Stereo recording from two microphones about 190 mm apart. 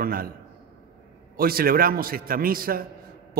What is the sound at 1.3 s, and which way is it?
A man's voice, 50° right (ahead or behind).